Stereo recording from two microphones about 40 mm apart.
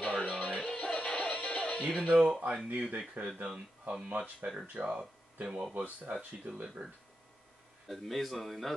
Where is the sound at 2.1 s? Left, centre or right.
Centre.